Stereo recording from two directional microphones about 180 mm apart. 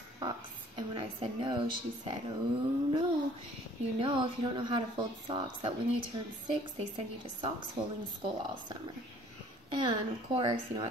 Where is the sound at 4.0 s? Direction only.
30° right (ahead or behind).